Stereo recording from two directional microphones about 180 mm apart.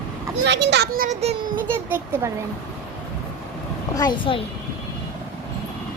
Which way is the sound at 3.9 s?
25° left (ahead or behind).